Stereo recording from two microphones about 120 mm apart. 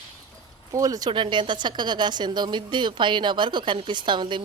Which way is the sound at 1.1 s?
40° right (ahead or behind).